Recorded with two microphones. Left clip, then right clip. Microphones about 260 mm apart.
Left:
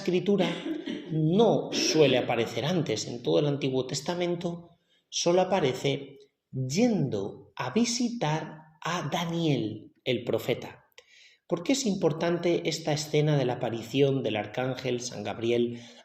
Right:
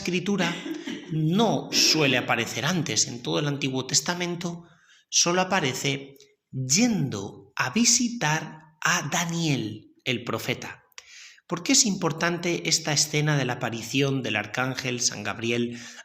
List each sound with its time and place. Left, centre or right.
0.0 s speech: right